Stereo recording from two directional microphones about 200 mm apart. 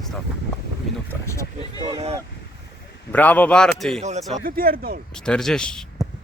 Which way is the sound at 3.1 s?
10° left (ahead or behind).